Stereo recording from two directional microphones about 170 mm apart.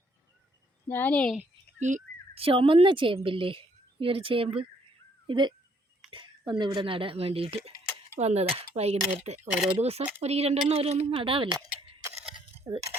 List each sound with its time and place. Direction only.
0.9 s speech: 10° left (ahead or behind)
1.9 s speech: 45° right (ahead or behind)
2.3 s speech: 35° right (ahead or behind)
9.4 s speech: 5° right (ahead or behind)
9.7 s speech: 40° right (ahead or behind)